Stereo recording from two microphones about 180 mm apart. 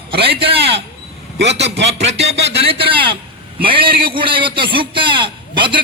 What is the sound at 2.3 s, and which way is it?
Speech, 70° right (ahead or behind).